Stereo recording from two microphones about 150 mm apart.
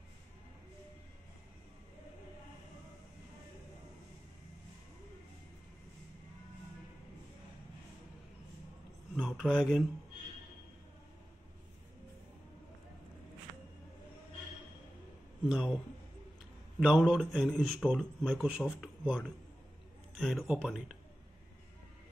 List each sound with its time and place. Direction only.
9.1 s speech: centre (ahead or behind)
15.4 s a man's voice: 5° right (ahead or behind)
16.8 s a man's voice: 5° right (ahead or behind)